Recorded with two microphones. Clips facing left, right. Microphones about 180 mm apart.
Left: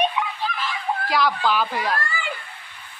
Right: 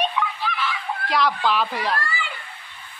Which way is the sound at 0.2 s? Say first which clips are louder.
Right 1 dB; 15° left (ahead or behind).